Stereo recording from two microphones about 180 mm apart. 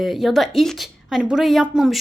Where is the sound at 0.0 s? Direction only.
Centre (ahead or behind).